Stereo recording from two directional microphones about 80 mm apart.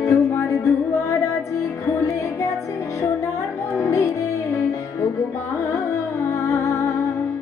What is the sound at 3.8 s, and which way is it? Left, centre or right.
Music, left.